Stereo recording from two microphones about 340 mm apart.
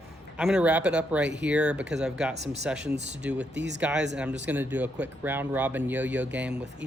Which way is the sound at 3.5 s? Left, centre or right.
Right.